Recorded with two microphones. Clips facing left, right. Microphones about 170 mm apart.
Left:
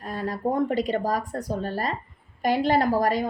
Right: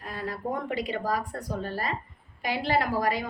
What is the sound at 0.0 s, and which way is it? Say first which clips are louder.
A woman's voice: left 6 dB; 45° left (ahead or behind).